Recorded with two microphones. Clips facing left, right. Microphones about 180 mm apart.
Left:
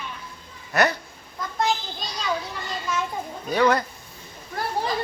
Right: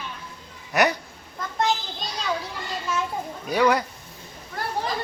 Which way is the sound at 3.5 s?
10° right (ahead or behind).